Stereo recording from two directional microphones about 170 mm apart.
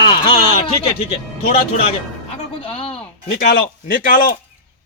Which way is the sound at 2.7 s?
35° left (ahead or behind).